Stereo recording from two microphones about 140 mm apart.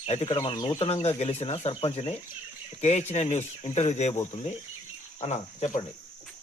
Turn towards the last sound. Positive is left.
turn(degrees=50)  # may be behind; listen again after turning